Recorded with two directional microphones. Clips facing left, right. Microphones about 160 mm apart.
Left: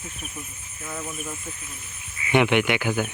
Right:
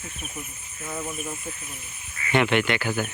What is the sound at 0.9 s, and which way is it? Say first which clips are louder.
Speech: right 1 dB; 10° right (ahead or behind).